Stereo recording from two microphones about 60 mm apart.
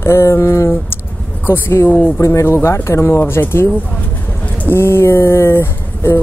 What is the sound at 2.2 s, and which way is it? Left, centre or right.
Speech, left.